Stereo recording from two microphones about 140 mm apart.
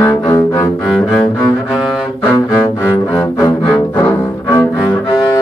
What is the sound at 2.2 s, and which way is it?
Cello, 20° left (ahead or behind).